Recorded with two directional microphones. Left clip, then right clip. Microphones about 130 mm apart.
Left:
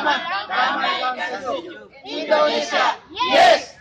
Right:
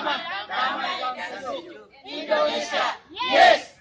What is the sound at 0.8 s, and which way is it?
Speech, 15° left (ahead or behind).